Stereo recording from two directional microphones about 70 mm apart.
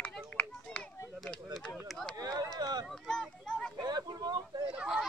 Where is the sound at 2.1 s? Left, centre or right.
Right.